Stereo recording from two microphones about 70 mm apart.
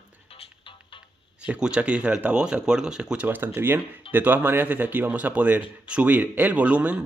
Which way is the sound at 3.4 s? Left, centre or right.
Right.